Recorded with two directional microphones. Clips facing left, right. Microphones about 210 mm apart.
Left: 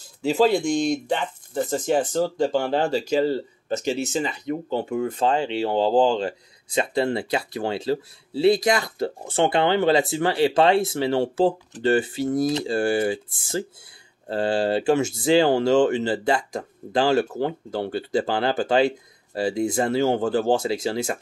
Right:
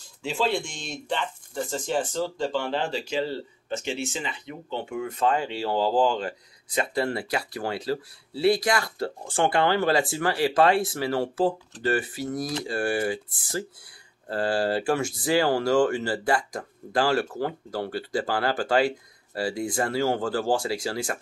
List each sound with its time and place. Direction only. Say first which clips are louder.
0.2 s speech: left 8 dB; 40° left (ahead or behind); by 21.2 s 20° left (ahead or behind)